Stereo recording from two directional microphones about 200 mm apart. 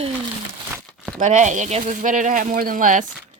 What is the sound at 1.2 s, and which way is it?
Speech, 35° right (ahead or behind).